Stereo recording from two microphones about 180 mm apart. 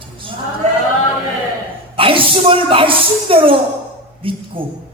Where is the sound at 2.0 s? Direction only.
30° right (ahead or behind).